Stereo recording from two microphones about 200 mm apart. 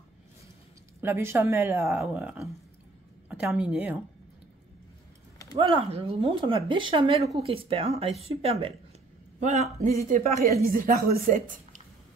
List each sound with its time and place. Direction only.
1.0 s a woman's voice: 10° right (ahead or behind)
5.6 s a woman's voice: 30° right (ahead or behind)